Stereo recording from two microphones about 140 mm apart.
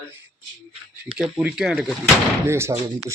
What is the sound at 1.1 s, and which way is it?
Speech, 5° right (ahead or behind).